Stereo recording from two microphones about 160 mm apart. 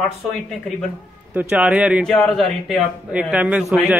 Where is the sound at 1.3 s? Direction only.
10° right (ahead or behind).